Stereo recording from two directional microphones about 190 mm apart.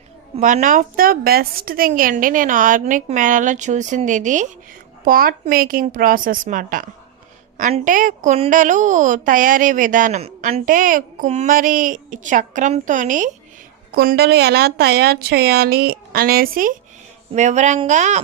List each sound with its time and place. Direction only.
0.3 s a woman's voice: 40° right (ahead or behind)
10.7 s a woman's voice: 45° right (ahead or behind)
13.9 s a woman's voice: 55° right (ahead or behind)
17.3 s a woman's voice: 40° right (ahead or behind)